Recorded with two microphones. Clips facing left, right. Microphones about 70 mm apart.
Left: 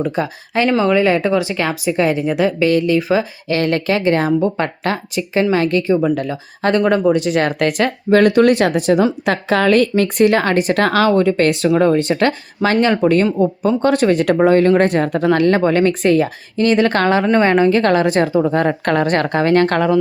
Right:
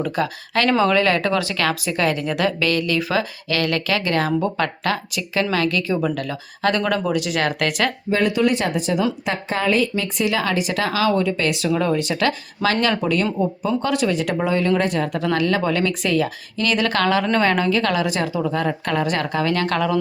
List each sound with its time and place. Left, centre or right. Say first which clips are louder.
0.0 s speech: left 3 dB; left
0.7 s speech: left 3 dB; centre; by 7.9 s left
8.1 s speech: left 9 dB; left
13.6 s speech: left 7 dB; left